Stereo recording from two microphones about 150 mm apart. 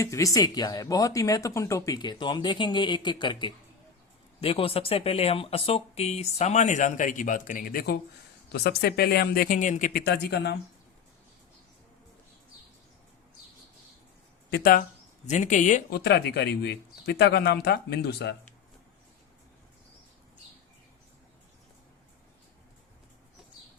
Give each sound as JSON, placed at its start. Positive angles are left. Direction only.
{"t": 0.0, "sound": "speech", "side_deg": 20}
{"t": 9.9, "sound": "speech", "side_deg": 90}
{"t": 14.5, "sound": "speech", "side_deg": 75}
{"t": 15.3, "sound": "speech", "side_deg": 55}
{"t": 15.9, "sound": "speech", "side_deg": 90}